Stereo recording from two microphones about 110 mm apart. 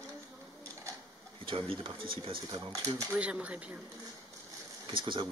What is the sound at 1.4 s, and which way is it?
Speech, 60° right (ahead or behind).